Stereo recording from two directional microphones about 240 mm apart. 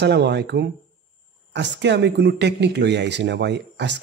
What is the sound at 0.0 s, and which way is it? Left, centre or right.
Speech, right.